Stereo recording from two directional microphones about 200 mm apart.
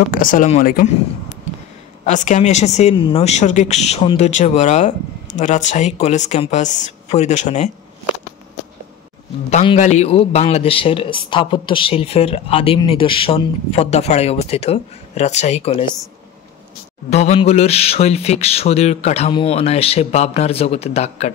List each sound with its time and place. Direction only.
0.1 s a woman's voice: 40° left (ahead or behind)
2.0 s a woman's voice: 40° left (ahead or behind)
9.5 s a man's voice: 35° left (ahead or behind)
17.1 s a woman's voice: 30° left (ahead or behind)